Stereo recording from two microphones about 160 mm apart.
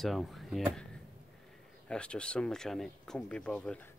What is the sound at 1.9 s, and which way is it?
Speech, 5° left (ahead or behind).